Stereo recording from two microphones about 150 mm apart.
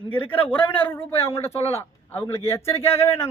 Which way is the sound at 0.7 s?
10° left (ahead or behind).